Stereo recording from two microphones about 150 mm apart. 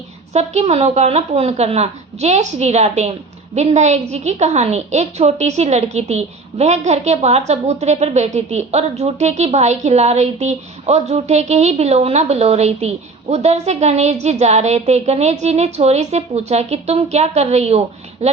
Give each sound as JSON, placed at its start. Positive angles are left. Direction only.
{"t": 0.3, "sound": "a woman's voice", "side_deg": -45}